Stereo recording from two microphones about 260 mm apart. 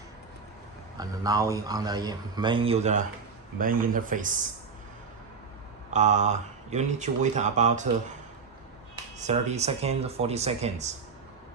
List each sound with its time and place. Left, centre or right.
0.9 s a man's voice: centre; by 4.4 s right
5.9 s speech: right
9.1 s speech: right